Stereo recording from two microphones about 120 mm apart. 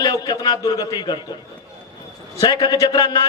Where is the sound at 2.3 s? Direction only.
30° left (ahead or behind).